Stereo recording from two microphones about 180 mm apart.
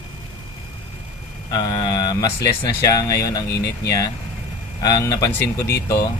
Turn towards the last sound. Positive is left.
turn(degrees=60)  # may be behind; listen again after turning